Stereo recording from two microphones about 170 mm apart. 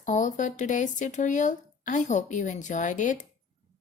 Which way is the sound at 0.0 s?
45° left (ahead or behind).